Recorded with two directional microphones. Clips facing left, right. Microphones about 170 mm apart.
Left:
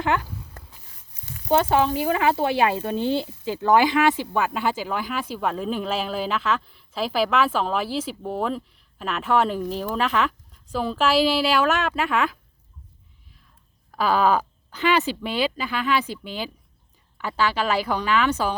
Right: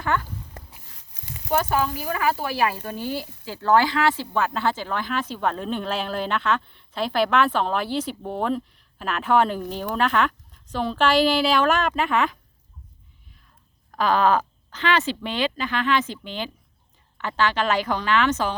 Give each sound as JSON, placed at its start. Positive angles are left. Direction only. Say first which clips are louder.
{"t": 0.0, "sound": "speech", "louder": "left 2 dB", "side_deg": 15}
{"t": 0.9, "sound": "a sound", "louder": "right 1 dB", "side_deg": -90}
{"t": 1.5, "sound": "speech", "louder": "left 3 dB", "side_deg": 25}
{"t": 13.9, "sound": "speech", "louder": "even", "side_deg": 5}